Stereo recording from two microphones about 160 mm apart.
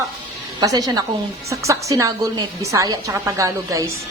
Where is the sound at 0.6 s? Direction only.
20° right (ahead or behind).